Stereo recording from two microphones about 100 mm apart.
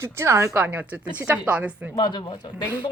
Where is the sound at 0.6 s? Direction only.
15° right (ahead or behind).